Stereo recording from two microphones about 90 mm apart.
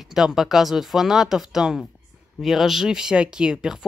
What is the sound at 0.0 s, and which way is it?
Speech, 5° right (ahead or behind).